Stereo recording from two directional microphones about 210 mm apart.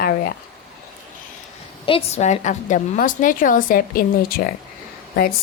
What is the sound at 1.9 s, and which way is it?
A woman's voice, 30° left (ahead or behind).